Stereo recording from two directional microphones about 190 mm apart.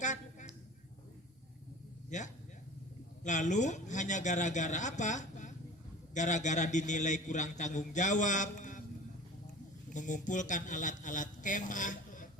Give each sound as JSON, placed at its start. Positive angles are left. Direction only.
{"t": 0.0, "sound": "a sound", "side_deg": 40}
{"t": 2.0, "sound": "a man's voice", "side_deg": 40}
{"t": 9.9, "sound": "a man's voice", "side_deg": 40}